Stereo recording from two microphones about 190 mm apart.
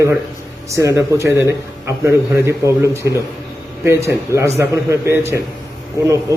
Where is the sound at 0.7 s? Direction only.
15° right (ahead or behind).